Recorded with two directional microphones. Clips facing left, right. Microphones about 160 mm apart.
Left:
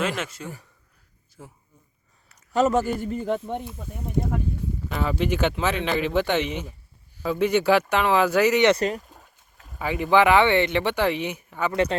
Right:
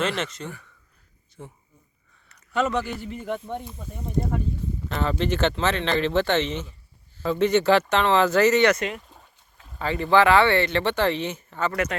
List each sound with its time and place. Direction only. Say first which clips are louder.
0.2 s speech: right 2 dB; 5° left (ahead or behind)
2.5 s a man's voice: left 4 dB; 40° left (ahead or behind)
3.5 s speech: left 2 dB; 10° left (ahead or behind)
4.9 s speech: even; 5° left (ahead or behind)
8.7 s a man's voice: left 4 dB; 35° left (ahead or behind)
9.0 s boat: left 3 dB; centre (ahead or behind)
9.8 s speech: even; 15° left (ahead or behind)